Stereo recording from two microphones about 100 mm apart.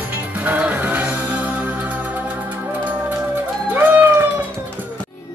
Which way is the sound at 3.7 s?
20° right (ahead or behind).